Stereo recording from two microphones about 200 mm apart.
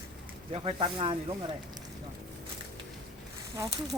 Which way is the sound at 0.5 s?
25° right (ahead or behind).